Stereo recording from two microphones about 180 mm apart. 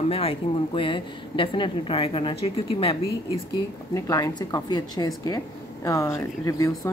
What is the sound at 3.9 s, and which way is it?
A woman's voice, 20° left (ahead or behind).